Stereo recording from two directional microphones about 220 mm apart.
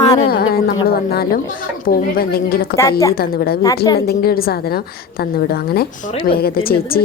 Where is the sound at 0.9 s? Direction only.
45° left (ahead or behind).